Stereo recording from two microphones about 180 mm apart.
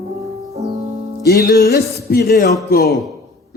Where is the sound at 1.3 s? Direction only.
55° left (ahead or behind).